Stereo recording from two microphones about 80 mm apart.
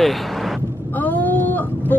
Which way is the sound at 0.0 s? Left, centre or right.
Centre.